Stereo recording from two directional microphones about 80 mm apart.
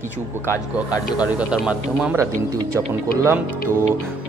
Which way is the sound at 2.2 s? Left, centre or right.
Right.